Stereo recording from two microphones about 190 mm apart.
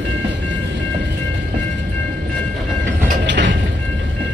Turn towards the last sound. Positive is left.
turn(degrees=-70)  # may be behind; listen again after turning